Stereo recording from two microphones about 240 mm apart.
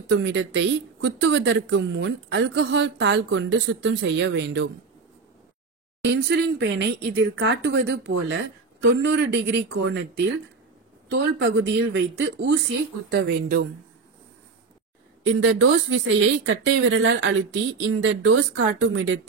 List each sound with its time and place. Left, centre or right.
0.1 s a woman's voice: right
6.0 s a woman's voice: right
15.2 s a woman's voice: right